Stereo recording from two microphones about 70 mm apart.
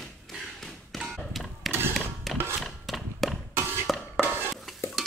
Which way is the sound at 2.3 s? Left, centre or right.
Centre.